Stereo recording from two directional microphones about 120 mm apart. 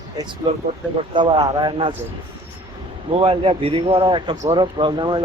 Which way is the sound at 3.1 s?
50° right (ahead or behind).